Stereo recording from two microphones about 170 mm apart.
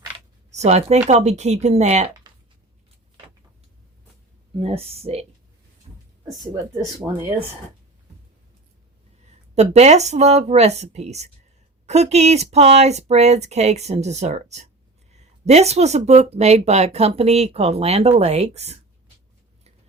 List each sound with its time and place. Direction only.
0.5 s speech: 40° right (ahead or behind)
2.3 s a sound: 25° right (ahead or behind)
4.6 s speech: 35° right (ahead or behind)
7.0 s speech: 5° right (ahead or behind)
9.2 s speech: 40° right (ahead or behind)